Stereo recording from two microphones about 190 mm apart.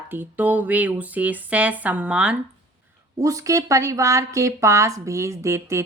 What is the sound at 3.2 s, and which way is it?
Speech, 15° right (ahead or behind).